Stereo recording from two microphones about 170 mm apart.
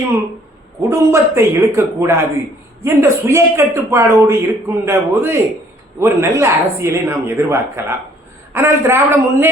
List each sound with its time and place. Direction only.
0.8 s a man's voice: 15° right (ahead or behind)